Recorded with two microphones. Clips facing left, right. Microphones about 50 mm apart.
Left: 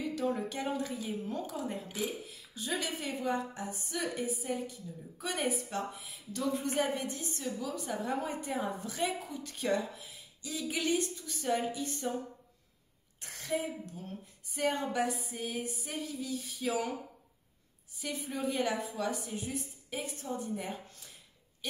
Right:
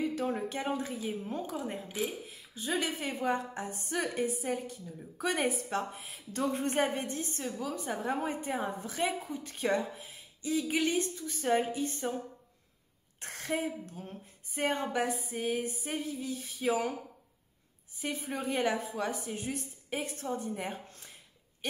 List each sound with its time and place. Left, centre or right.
0.0 s a woman's voice: right
7.5 s a woman's voice: right
13.2 s a woman's voice: right
14.0 s a woman's voice: right
17.9 s a woman's voice: right